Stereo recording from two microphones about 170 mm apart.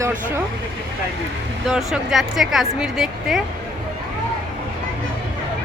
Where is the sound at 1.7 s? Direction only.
Centre (ahead or behind).